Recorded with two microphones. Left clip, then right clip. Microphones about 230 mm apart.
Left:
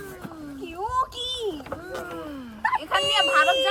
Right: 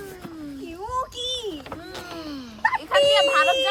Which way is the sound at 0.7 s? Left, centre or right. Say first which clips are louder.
Left 3 dB; centre.